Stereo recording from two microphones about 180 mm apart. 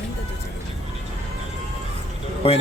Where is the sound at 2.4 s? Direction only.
35° left (ahead or behind).